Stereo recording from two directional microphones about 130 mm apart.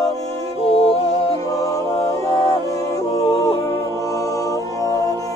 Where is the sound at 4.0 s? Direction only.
25° left (ahead or behind).